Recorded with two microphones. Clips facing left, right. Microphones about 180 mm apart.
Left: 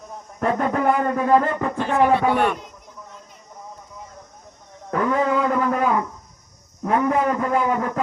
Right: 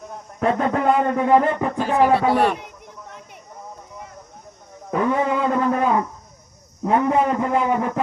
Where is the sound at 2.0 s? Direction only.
35° right (ahead or behind).